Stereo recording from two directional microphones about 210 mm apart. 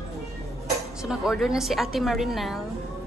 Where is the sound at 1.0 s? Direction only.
Centre (ahead or behind).